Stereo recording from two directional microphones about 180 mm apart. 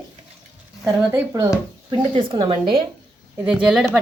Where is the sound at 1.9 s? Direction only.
30° right (ahead or behind).